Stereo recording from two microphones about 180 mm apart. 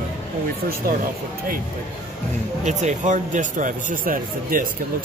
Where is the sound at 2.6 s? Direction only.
40° right (ahead or behind).